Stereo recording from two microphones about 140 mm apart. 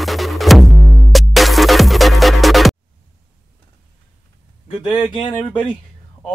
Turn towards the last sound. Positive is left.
turn(degrees=40)  # may be behind; listen again after turning